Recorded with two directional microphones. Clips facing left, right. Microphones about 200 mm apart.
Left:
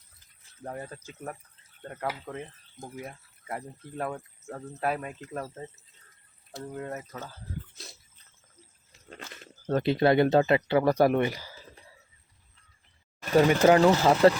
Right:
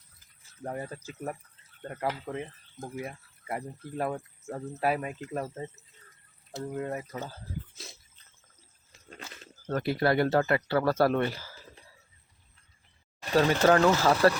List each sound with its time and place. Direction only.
0.6 s speech: 10° right (ahead or behind)
9.6 s speech: 20° left (ahead or behind)
13.3 s speech: 15° left (ahead or behind)